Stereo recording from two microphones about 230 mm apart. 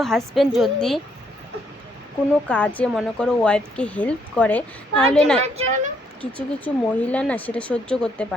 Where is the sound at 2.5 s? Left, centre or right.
Centre.